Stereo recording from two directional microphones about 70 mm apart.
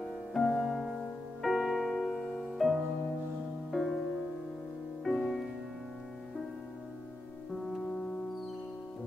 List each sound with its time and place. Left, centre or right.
0.3 s music: centre
5.0 s music: centre
7.6 s music: centre